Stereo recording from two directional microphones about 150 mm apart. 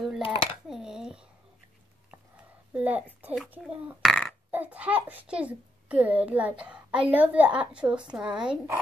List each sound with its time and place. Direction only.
0.2 s speech: 35° left (ahead or behind)
0.7 s a sound: 5° right (ahead or behind)
2.7 s a woman's voice: 10° right (ahead or behind)
4.0 s burping: centre (ahead or behind)
4.5 s a child's voice: 10° right (ahead or behind)